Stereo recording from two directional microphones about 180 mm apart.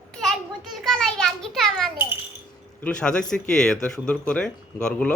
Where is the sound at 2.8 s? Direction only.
5° left (ahead or behind).